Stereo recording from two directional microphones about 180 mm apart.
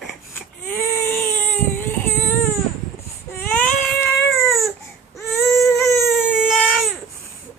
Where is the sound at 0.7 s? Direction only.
10° left (ahead or behind).